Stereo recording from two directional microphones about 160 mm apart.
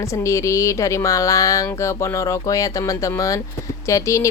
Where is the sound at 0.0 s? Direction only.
20° left (ahead or behind).